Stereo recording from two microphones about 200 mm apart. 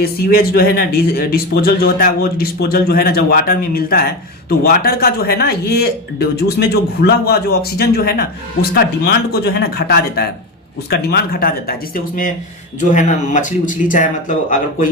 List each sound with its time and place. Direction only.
0.0 s a man's voice: 50° left (ahead or behind)